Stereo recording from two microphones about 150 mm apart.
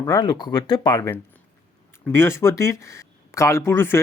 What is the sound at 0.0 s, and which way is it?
Speech, 25° left (ahead or behind).